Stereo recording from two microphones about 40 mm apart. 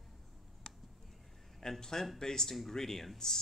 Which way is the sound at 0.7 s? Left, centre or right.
Centre.